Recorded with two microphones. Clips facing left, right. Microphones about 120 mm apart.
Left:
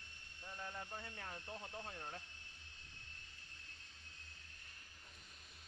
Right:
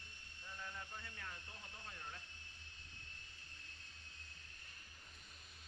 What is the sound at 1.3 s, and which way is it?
Speech, 35° left (ahead or behind).